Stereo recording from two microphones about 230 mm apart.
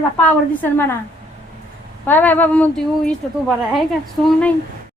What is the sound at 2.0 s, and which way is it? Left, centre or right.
Speech, centre.